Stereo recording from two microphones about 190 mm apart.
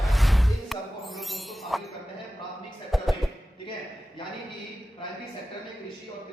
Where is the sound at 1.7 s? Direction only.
Centre (ahead or behind).